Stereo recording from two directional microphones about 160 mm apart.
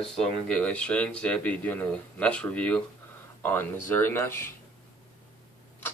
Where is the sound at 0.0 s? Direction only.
5° left (ahead or behind).